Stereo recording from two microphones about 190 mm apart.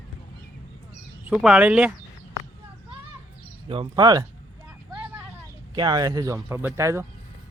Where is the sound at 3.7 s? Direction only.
25° right (ahead or behind).